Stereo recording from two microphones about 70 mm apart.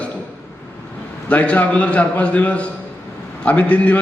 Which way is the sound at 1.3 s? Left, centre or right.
Left.